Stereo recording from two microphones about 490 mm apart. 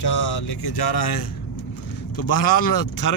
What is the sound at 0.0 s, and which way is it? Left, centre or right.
Speech, left.